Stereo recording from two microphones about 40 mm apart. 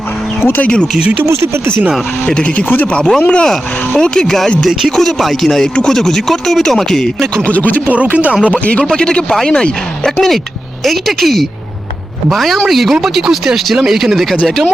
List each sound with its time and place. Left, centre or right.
1.2 s speech: right
2.3 s speech: left; by 7.1 s centre
7.5 s speech: left
8.1 s speech: right
8.5 s speech: left
8.9 s speech: left
10.8 s speech: centre